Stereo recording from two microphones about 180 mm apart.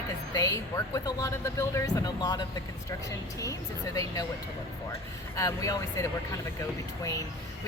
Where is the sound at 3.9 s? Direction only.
20° left (ahead or behind).